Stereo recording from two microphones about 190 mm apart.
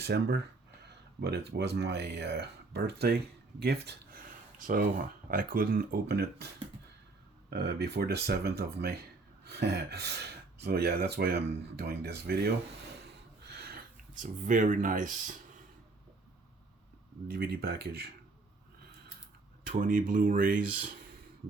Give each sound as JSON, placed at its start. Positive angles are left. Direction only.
{"t": 0.0, "sound": "speech", "side_deg": -60}
{"t": 3.6, "sound": "a sound", "side_deg": -60}
{"t": 5.3, "sound": "speech", "side_deg": -45}
{"t": 7.5, "sound": "speech", "side_deg": -60}
{"t": 13.5, "sound": "a sound", "side_deg": -55}
{"t": 17.2, "sound": "speech", "side_deg": -55}
{"t": 19.7, "sound": "speech", "side_deg": -45}